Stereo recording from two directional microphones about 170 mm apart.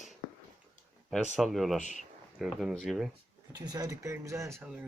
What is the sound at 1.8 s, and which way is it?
Speech, 45° left (ahead or behind).